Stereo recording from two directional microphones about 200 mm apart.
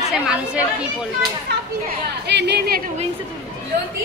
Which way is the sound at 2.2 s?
55° right (ahead or behind).